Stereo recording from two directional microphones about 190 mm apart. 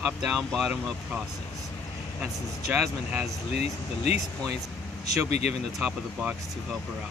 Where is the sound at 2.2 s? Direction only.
5° right (ahead or behind).